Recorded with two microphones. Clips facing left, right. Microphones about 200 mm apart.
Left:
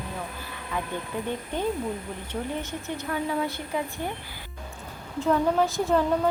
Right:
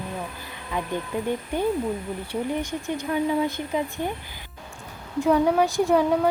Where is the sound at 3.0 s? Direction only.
15° right (ahead or behind).